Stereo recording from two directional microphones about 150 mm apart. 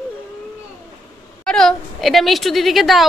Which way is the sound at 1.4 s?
5° left (ahead or behind).